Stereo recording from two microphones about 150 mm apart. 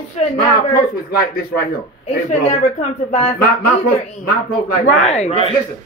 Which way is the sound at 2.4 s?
50° left (ahead or behind).